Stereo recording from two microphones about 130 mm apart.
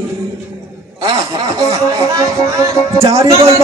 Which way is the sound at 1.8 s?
25° right (ahead or behind).